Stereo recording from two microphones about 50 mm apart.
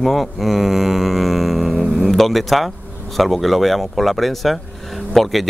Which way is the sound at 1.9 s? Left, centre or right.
Centre.